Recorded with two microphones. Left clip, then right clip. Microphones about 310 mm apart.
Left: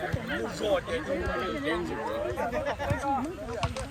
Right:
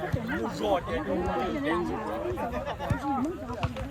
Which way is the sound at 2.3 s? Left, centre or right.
Left.